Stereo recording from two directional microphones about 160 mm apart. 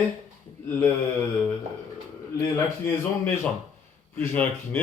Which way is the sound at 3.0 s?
15° left (ahead or behind).